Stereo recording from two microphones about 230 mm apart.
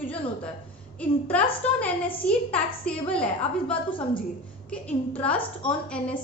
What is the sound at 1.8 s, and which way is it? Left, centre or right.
A woman's voice, centre.